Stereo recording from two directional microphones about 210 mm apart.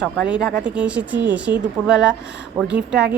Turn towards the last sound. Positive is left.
turn(degrees=-5)  # may be behind; listen again after turning